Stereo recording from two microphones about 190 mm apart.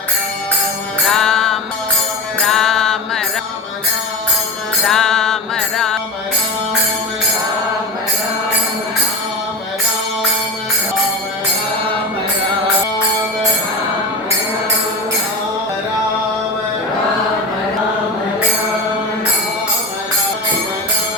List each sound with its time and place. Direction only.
1.1 s music: centre (ahead or behind)
2.4 s mantra: centre (ahead or behind)
4.9 s music: centre (ahead or behind)